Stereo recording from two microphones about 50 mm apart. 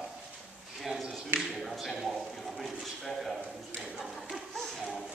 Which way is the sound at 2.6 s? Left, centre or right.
Centre.